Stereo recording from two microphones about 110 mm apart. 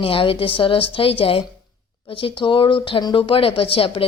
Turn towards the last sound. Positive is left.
turn(degrees=55)  # may be behind; listen again after turning